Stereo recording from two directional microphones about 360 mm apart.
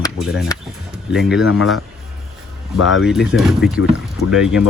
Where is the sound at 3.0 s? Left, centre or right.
Centre.